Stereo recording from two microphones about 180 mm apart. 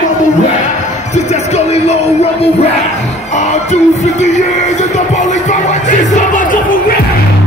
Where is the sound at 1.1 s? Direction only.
40° left (ahead or behind).